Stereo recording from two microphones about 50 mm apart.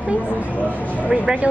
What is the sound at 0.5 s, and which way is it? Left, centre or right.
Speech, left.